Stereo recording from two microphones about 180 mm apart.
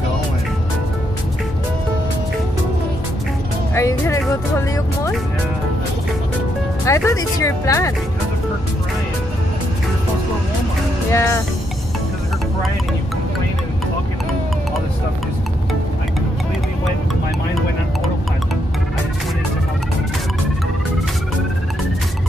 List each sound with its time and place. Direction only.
3.7 s speech: 15° left (ahead or behind)
6.8 s speech: 15° left (ahead or behind)
11.1 s speech: 15° left (ahead or behind)